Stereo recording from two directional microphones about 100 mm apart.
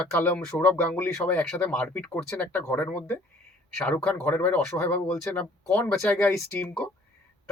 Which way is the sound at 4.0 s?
10° left (ahead or behind).